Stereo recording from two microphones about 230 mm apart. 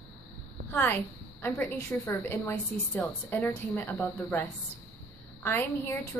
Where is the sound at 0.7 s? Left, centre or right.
Centre.